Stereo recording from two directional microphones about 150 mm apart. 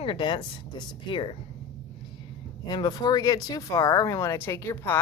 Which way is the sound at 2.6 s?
25° left (ahead or behind).